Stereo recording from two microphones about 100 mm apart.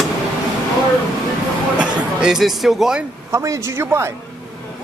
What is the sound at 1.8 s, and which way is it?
Speech, 5° right (ahead or behind).